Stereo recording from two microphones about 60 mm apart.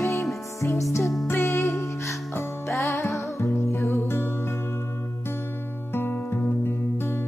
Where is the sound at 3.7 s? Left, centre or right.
Left.